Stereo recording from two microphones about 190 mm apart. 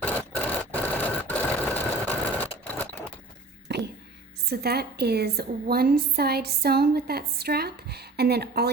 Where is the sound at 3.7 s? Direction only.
65° right (ahead or behind).